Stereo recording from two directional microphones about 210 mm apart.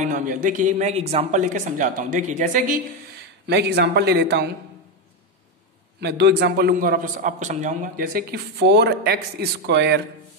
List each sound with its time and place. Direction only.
0.0 s speech: 40° right (ahead or behind)
3.4 s a man's voice: 50° right (ahead or behind)
5.9 s a man's voice: 55° right (ahead or behind)